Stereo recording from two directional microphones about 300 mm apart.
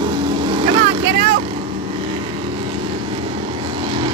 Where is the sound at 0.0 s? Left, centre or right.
Centre.